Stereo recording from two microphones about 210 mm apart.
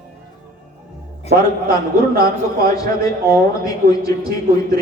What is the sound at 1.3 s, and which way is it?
A man's voice, 50° right (ahead or behind).